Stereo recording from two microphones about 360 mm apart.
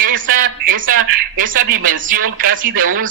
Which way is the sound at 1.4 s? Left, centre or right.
Right.